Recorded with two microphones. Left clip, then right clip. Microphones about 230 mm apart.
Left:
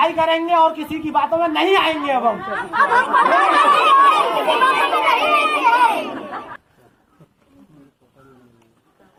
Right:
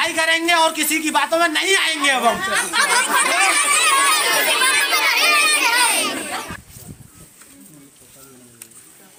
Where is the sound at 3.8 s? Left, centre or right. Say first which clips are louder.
Left 4 dB; right.